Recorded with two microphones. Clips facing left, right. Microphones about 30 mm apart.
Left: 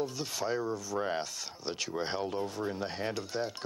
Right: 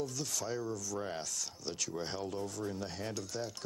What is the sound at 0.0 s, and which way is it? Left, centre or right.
Speech, left.